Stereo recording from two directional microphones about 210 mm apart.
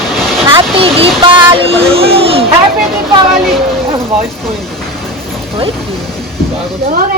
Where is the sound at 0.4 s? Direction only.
25° right (ahead or behind).